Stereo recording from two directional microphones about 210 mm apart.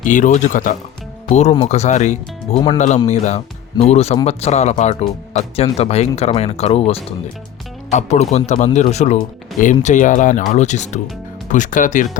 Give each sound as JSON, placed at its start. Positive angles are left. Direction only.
{"t": 0.0, "sound": "speech", "side_deg": 35}